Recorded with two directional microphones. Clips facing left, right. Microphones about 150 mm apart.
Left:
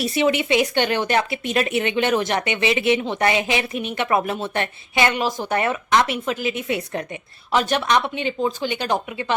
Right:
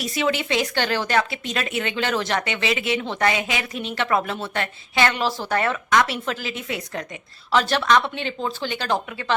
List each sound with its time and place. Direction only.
0.0 s a woman's voice: 25° left (ahead or behind)